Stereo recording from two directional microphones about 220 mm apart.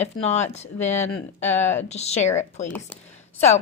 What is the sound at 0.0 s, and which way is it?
A woman's voice, 30° left (ahead or behind).